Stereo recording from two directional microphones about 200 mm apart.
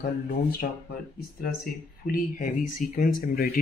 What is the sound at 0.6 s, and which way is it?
Speech, 55° left (ahead or behind).